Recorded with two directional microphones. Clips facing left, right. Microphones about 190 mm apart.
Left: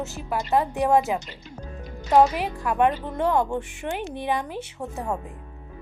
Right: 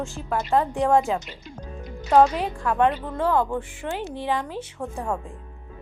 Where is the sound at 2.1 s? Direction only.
10° left (ahead or behind).